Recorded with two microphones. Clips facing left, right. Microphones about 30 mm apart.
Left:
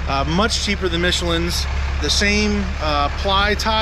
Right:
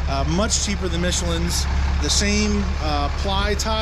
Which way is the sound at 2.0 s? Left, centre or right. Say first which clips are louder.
Left 4 dB; left.